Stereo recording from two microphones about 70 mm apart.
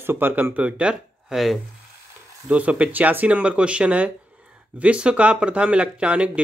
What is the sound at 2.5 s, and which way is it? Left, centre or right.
Speech, centre.